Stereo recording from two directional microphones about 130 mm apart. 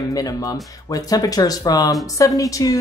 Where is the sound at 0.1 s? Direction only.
25° left (ahead or behind).